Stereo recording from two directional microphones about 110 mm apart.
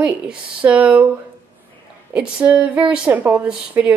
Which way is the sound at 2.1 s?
10° right (ahead or behind).